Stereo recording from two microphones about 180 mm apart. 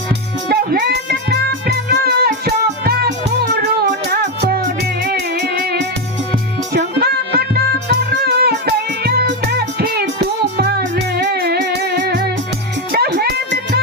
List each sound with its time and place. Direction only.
0.4 s music: 60° right (ahead or behind)
4.1 s music: 60° right (ahead or behind)